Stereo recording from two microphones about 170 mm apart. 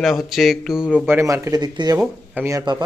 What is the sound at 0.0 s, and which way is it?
Speech, centre (ahead or behind).